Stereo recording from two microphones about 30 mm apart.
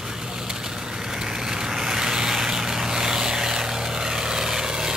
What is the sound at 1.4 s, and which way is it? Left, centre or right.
Vehicle, right.